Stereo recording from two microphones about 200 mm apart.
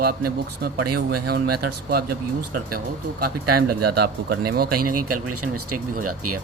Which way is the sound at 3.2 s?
50° right (ahead or behind).